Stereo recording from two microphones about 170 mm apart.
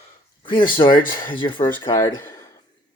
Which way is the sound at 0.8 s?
30° left (ahead or behind).